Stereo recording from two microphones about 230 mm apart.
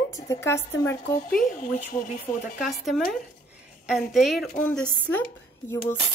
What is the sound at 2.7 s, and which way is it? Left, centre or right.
A woman's voice, centre.